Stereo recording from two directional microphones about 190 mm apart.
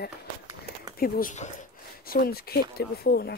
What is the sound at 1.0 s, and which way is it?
A woman's voice, 45° left (ahead or behind).